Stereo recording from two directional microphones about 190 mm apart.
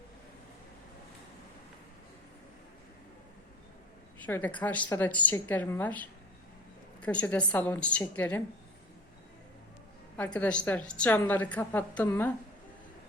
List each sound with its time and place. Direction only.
4.3 s a woman's voice: 10° left (ahead or behind)
10.2 s a woman's voice: 5° left (ahead or behind)